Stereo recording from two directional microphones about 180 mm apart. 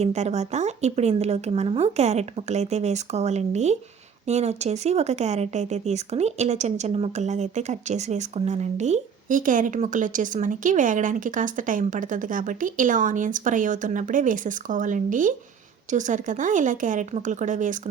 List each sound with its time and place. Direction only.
0.0 s speech: 40° right (ahead or behind)